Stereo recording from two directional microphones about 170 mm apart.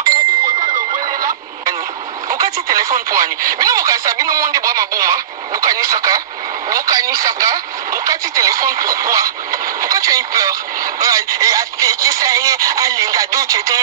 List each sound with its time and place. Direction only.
0.0 s ding: 25° right (ahead or behind)
2.2 s speech: 20° right (ahead or behind)